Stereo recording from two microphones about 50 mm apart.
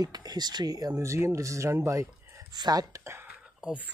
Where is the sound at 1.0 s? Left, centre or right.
Right.